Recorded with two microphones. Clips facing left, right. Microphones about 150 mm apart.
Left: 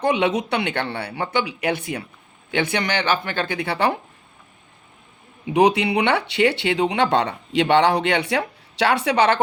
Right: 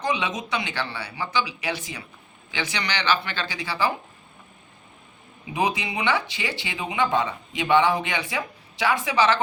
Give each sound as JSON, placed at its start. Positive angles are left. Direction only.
{"t": 0.0, "sound": "speech", "side_deg": 60}
{"t": 5.5, "sound": "speech", "side_deg": 70}